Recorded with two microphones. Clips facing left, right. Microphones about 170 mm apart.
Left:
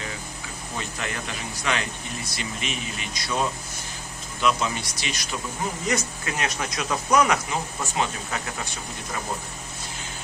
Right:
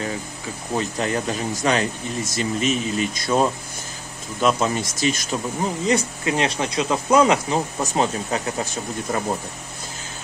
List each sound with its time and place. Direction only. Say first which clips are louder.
0.7 s a man's voice: right 9 dB; 35° right (ahead or behind)
5.9 s speech: right 7 dB; 30° right (ahead or behind)
7.8 s a man's voice: right 6 dB; 40° right (ahead or behind)